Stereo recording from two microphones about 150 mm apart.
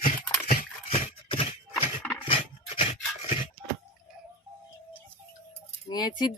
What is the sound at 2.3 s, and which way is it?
Dog, 35° left (ahead or behind).